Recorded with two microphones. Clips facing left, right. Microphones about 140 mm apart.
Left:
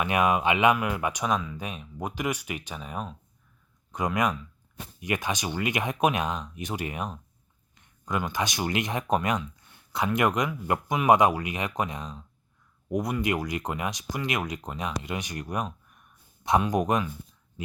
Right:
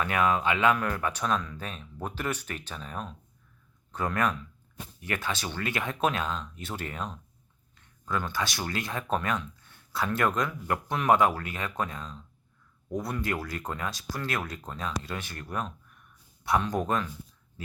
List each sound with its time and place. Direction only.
0.0 s speech: 15° left (ahead or behind)